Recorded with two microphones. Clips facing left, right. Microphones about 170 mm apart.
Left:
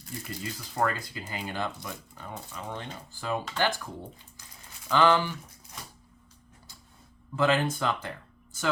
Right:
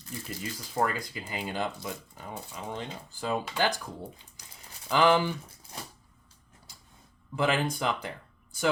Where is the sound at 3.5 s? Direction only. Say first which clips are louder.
Left 2 dB; 15° right (ahead or behind).